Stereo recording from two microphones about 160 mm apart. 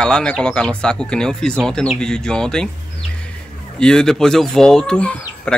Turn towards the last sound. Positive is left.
turn(degrees=5)  # may be behind; listen again after turning